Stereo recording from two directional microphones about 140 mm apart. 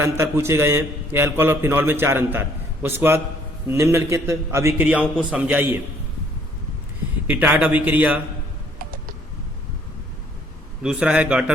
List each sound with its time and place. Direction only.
0.0 s a man's voice: 20° right (ahead or behind)
7.3 s a man's voice: 10° right (ahead or behind)
8.8 s typing: 85° right
10.8 s a man's voice: 5° right (ahead or behind)